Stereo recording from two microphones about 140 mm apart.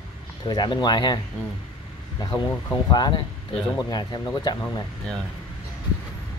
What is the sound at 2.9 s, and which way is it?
Speech, 30° left (ahead or behind).